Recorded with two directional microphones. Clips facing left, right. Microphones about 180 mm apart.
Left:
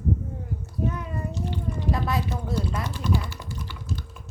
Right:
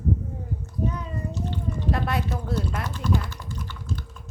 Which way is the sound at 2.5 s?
10° left (ahead or behind).